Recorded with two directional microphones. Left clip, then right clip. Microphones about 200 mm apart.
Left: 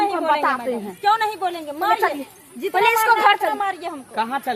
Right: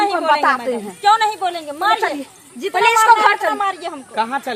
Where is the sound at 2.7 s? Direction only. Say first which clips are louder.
Right 5 dB; 25° left (ahead or behind).